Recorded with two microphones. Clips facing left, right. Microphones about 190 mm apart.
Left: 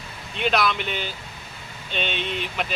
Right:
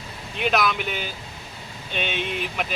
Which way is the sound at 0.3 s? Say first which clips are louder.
Even; 5° right (ahead or behind).